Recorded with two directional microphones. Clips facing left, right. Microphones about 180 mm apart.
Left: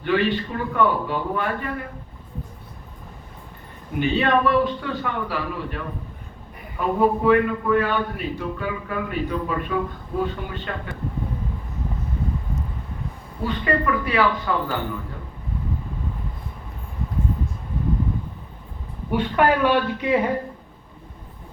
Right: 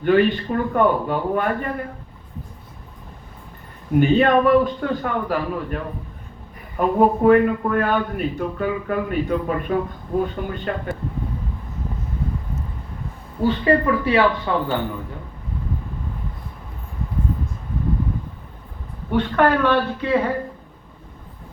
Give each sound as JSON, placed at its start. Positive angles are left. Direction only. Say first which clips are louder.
{"t": 0.0, "sound": "a man's voice", "louder": "right 5 dB", "side_deg": -45}
{"t": 4.0, "sound": "a man's voice", "louder": "right 4 dB", "side_deg": -45}
{"t": 13.4, "sound": "speech", "louder": "right 5 dB", "side_deg": -30}
{"t": 19.1, "sound": "speech", "louder": "right 2 dB", "side_deg": 10}